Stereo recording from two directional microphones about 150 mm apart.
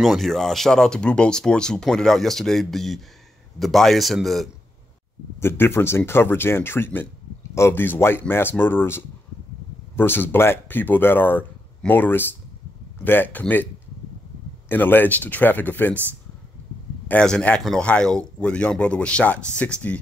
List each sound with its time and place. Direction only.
0.0 s speech: centre (ahead or behind)
5.4 s speech: 15° left (ahead or behind)
14.7 s speech: 15° left (ahead or behind)
17.1 s speech: 5° left (ahead or behind)